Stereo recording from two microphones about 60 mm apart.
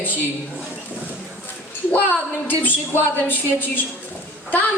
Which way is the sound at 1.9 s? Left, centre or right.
Left.